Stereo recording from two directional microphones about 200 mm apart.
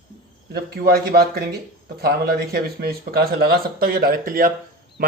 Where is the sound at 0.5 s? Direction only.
50° right (ahead or behind).